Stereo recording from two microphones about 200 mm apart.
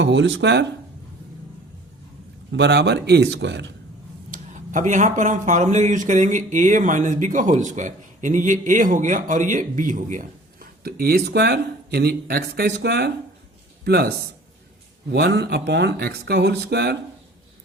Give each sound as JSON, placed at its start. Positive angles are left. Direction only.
{"t": 0.0, "sound": "speech", "side_deg": -60}
{"t": 2.5, "sound": "speech", "side_deg": -60}
{"t": 4.3, "sound": "a man's voice", "side_deg": -40}
{"t": 15.1, "sound": "speech", "side_deg": -55}